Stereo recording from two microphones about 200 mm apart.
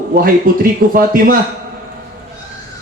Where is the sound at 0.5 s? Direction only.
45° right (ahead or behind).